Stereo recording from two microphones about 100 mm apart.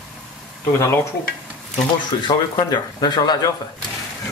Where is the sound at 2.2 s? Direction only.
45° left (ahead or behind).